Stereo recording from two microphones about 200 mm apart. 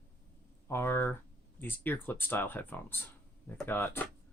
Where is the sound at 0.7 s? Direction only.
10° left (ahead or behind).